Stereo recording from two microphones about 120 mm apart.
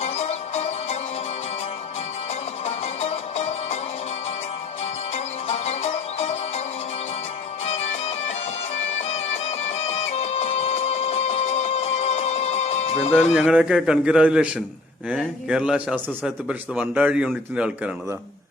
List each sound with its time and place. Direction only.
0.0 s music: 60° left (ahead or behind)
2.6 s music: 55° left (ahead or behind)
5.1 s music: 60° left (ahead or behind)
7.7 s music: 60° left (ahead or behind)
13.3 s a man's voice: 5° right (ahead or behind)